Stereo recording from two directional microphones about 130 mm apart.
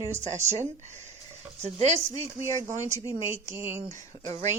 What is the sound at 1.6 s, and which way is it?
Speech, 55° right (ahead or behind).